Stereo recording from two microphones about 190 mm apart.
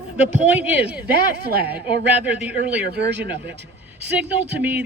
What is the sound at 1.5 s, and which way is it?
Speech, 55° right (ahead or behind).